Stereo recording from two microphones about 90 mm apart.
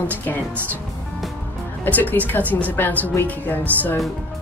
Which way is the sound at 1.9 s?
20° left (ahead or behind).